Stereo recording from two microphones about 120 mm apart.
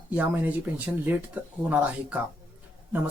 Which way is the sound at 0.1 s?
15° right (ahead or behind).